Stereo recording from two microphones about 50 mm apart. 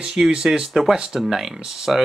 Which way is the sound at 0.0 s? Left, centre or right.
Centre.